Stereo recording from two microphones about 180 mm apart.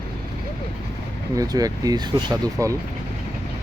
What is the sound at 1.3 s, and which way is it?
Speech, 20° right (ahead or behind).